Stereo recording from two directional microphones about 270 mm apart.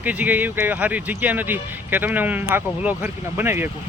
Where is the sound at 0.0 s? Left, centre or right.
Centre.